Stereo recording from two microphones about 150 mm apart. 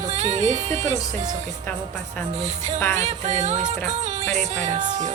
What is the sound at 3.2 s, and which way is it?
Music, 50° right (ahead or behind).